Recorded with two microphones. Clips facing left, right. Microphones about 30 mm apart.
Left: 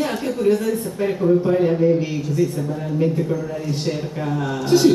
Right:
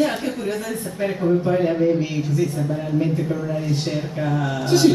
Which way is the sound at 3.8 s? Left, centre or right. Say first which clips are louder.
Even; centre.